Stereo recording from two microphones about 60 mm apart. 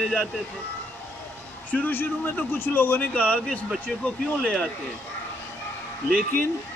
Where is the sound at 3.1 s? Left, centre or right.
Left.